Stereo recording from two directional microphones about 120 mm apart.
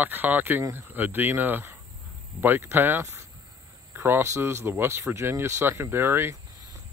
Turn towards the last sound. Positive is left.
turn(degrees=-20)  # may be behind; listen again after turning